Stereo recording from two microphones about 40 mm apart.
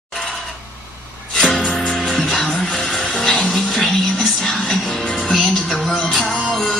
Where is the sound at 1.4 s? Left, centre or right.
Centre.